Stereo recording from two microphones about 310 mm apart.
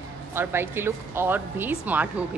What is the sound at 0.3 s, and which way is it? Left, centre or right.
Speech, centre.